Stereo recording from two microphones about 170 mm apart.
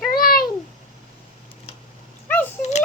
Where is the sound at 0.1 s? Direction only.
60° left (ahead or behind).